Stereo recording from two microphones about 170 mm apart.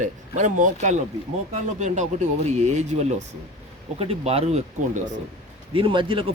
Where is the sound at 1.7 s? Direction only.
45° right (ahead or behind).